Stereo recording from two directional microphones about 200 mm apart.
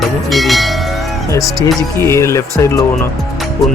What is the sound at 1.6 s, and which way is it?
Speech, 15° left (ahead or behind).